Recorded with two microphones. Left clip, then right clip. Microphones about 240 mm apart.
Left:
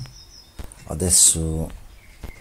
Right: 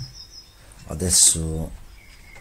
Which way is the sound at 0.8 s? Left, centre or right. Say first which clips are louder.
Even; centre.